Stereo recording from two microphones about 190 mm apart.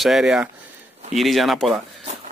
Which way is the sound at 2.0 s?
35° right (ahead or behind).